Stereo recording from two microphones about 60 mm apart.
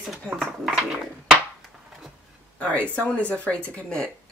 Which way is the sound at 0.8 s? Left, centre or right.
Centre.